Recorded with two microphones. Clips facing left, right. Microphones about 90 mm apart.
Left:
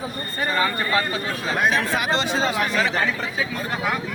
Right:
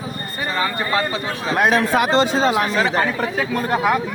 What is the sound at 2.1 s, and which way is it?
Speech, 40° right (ahead or behind).